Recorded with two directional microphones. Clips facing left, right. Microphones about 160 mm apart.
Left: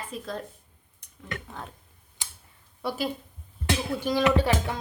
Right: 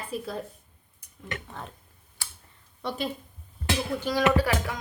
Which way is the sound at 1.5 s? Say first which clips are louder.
Even; centre (ahead or behind).